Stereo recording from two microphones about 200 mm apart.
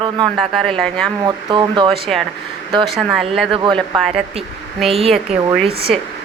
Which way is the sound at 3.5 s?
25° right (ahead or behind).